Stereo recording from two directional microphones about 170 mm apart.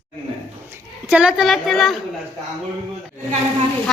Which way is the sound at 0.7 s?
10° right (ahead or behind).